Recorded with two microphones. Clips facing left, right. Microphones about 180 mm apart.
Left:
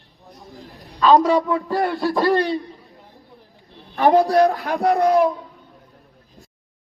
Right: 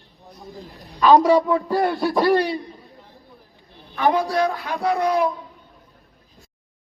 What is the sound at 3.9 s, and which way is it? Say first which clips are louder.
A man's voice: left 5 dB; 40° left (ahead or behind).